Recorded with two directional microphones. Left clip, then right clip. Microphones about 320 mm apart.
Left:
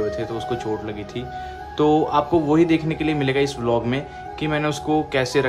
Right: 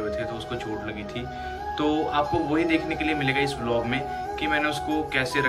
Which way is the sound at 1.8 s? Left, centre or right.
Centre.